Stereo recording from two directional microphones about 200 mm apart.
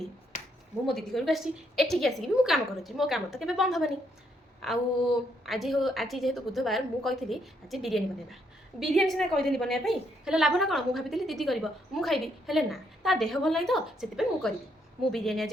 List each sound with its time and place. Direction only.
0.9 s a woman's voice: centre (ahead or behind)